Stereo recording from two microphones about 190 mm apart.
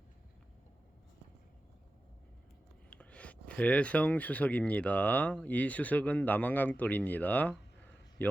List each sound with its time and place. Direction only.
2.9 s speech: 5° left (ahead or behind)